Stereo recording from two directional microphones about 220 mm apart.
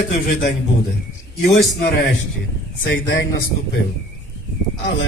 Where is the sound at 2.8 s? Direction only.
55° left (ahead or behind).